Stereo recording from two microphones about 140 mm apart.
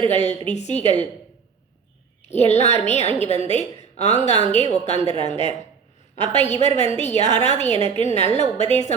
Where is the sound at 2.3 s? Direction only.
50° left (ahead or behind).